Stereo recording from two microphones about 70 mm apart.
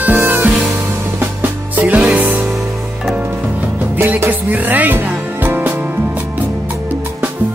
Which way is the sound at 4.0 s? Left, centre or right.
Right.